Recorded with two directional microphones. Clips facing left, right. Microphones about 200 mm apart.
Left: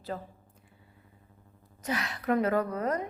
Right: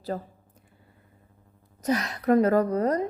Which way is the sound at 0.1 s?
40° right (ahead or behind).